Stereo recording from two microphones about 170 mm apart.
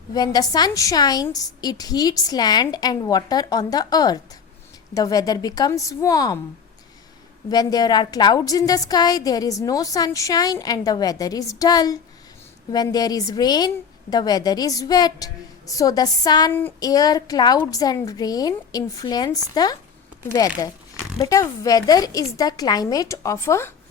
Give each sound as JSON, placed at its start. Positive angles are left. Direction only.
{"t": 0.1, "sound": "a woman's voice", "side_deg": 25}
{"t": 7.5, "sound": "a woman's voice", "side_deg": 25}